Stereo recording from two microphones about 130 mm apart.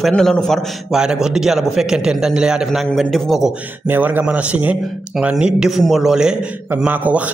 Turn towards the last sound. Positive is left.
turn(degrees=-10)  # may be behind; listen again after turning